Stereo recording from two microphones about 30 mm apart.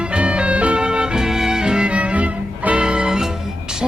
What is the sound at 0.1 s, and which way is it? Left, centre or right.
Music, right.